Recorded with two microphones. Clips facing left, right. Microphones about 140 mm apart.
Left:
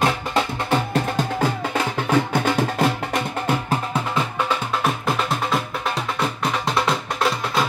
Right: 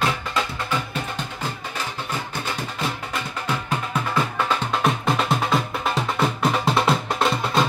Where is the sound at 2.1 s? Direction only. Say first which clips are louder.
Left 10 dB; 60° left (ahead or behind).